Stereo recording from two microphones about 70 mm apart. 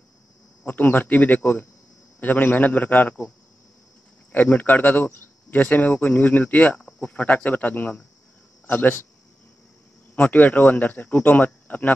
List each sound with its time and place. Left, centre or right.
0.7 s speech: left
4.3 s speech: left
10.1 s speech: left